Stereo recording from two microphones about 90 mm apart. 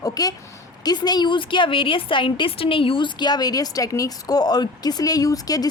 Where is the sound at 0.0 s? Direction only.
45° left (ahead or behind).